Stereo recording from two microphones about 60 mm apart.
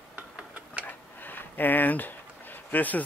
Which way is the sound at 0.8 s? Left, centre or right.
Left.